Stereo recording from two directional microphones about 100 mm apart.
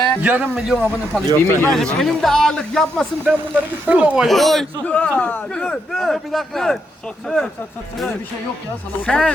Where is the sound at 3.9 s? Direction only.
15° right (ahead or behind).